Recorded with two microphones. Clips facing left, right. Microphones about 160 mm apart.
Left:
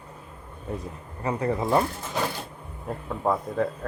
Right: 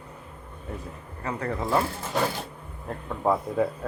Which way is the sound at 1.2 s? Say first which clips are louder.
Left 4 dB; 15° left (ahead or behind).